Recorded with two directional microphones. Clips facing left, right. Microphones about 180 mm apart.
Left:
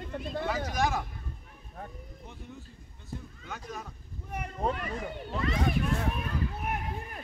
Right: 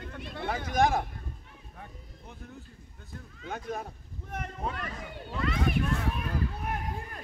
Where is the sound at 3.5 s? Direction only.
55° right (ahead or behind).